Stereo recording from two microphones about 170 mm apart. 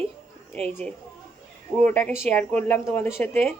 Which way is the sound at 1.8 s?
10° left (ahead or behind).